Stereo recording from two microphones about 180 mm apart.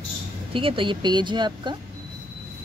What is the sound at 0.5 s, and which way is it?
Speech, 30° right (ahead or behind).